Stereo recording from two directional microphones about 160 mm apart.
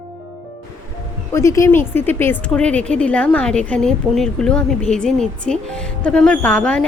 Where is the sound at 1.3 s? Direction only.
20° left (ahead or behind).